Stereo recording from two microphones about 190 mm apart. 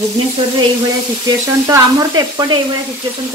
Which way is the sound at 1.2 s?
20° right (ahead or behind).